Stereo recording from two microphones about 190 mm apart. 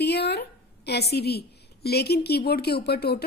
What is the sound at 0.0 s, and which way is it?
A woman's voice, 60° left (ahead or behind).